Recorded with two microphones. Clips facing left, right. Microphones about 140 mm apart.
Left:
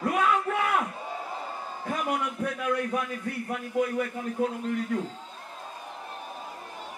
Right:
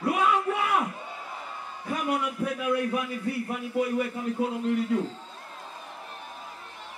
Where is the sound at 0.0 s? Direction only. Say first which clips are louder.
Right 1 dB; 10° right (ahead or behind).